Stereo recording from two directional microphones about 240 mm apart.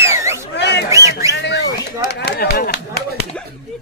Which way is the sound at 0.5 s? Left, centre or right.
Left.